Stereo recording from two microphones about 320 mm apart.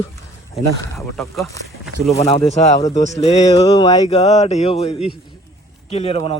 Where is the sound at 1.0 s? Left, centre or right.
Centre.